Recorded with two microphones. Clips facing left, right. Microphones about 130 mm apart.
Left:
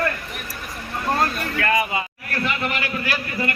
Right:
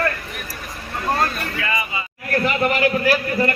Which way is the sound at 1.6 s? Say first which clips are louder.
Left 6 dB; 60° left (ahead or behind).